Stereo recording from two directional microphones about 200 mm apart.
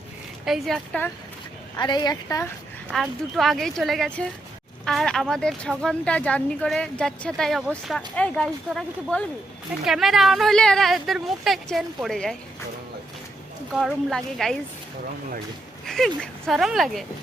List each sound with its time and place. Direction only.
0.4 s speech: centre (ahead or behind)
1.7 s a woman's voice: 20° left (ahead or behind)
2.9 s speech: centre (ahead or behind)
13.7 s speech: centre (ahead or behind)
15.9 s speech: centre (ahead or behind)